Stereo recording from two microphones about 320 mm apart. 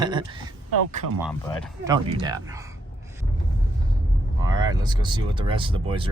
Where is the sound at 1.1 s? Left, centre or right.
Centre.